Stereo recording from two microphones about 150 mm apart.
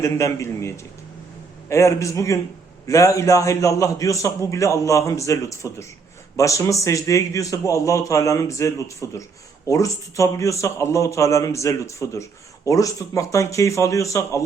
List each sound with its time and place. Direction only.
0.0 s a man's voice: 20° left (ahead or behind)
1.7 s a man's voice: 20° left (ahead or behind)